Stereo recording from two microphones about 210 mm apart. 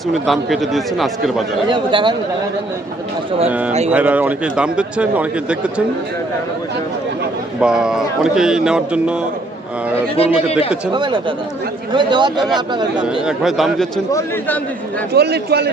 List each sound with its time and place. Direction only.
0.1 s speech: centre (ahead or behind)
1.7 s a man's voice: 20° right (ahead or behind)
3.8 s speech: 5° right (ahead or behind)
7.6 s speech: 5° right (ahead or behind)
10.2 s a man's voice: 30° left (ahead or behind)
10.9 s a man's voice: 20° right (ahead or behind)
13.0 s speech: centre (ahead or behind)
14.1 s a man's voice: 10° left (ahead or behind)
15.1 s a man's voice: 50° right (ahead or behind)